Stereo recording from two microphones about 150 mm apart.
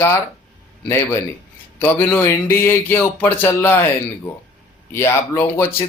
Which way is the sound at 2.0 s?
20° left (ahead or behind).